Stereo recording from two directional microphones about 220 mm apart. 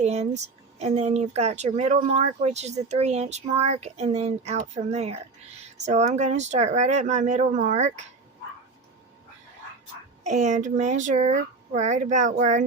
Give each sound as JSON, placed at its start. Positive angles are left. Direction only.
{"t": 0.0, "sound": "speech", "side_deg": -30}
{"t": 10.2, "sound": "speech", "side_deg": -35}